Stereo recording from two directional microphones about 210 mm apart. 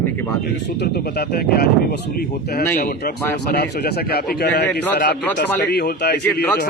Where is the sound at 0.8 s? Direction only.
50° left (ahead or behind).